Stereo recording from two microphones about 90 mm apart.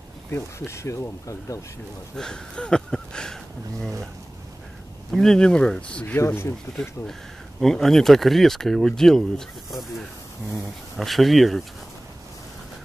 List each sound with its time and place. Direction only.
0.3 s speech: 30° left (ahead or behind)
2.1 s speech: 10° left (ahead or behind)
5.1 s speech: 5° left (ahead or behind)
6.1 s speech: 25° left (ahead or behind)
7.6 s speech: 5° left (ahead or behind)
11.0 s speech: centre (ahead or behind)